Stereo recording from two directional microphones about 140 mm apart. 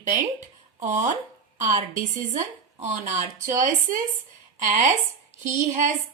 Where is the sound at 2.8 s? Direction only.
60° right (ahead or behind).